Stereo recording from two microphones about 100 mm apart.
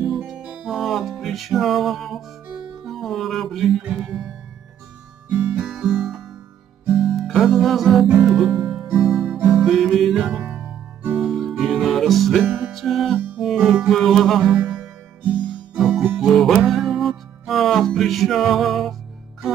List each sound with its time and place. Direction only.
0.3 s music: 5° right (ahead or behind)
3.8 s speech: 10° right (ahead or behind)
5.3 s music: 10° right (ahead or behind)
10.4 s music: 15° right (ahead or behind)
11.1 s music: centre (ahead or behind)